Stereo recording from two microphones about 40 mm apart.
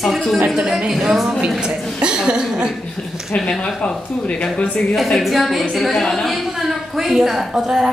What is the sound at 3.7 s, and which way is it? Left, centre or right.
Speech, left.